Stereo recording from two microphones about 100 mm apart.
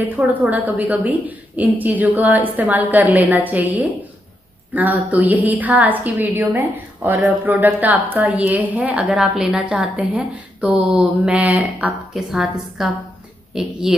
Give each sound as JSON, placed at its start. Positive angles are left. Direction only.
{"t": 0.0, "sound": "a woman's voice", "side_deg": -15}
{"t": 4.7, "sound": "a woman's voice", "side_deg": -15}
{"t": 12.1, "sound": "a woman's voice", "side_deg": -5}